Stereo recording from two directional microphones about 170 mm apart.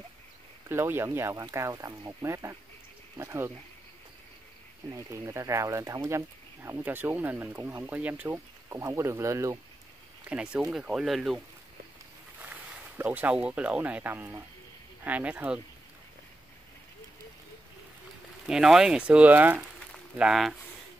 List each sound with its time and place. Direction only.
0.7 s speech: 15° right (ahead or behind)
4.9 s speech: 15° right (ahead or behind)
10.2 s speech: 5° right (ahead or behind)
18.5 s speech: 5° right (ahead or behind)